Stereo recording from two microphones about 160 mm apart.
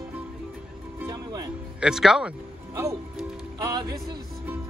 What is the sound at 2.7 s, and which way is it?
Speech, 20° right (ahead or behind).